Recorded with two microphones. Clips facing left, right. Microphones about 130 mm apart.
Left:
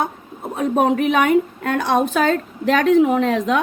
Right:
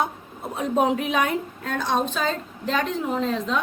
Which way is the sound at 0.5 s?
55° left (ahead or behind).